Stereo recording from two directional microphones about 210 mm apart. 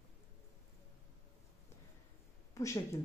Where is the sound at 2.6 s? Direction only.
15° left (ahead or behind).